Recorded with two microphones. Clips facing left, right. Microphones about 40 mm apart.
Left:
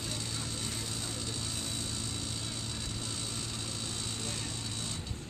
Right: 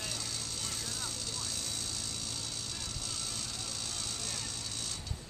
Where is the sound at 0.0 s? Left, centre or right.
Left.